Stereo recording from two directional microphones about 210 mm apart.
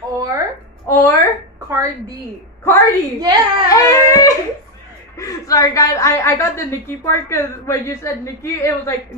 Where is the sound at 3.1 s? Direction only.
15° right (ahead or behind).